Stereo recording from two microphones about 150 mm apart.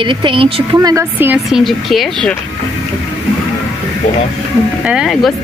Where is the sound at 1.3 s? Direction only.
Centre (ahead or behind).